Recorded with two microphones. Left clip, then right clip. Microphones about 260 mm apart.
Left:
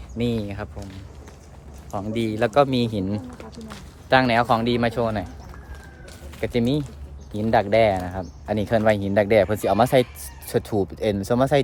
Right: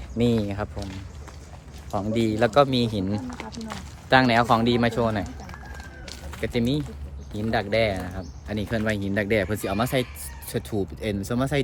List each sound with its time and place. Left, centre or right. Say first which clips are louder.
0.2 s speech: right 2 dB; centre
1.9 s a man's voice: right 1 dB; centre
6.4 s a man's voice: left 3 dB; centre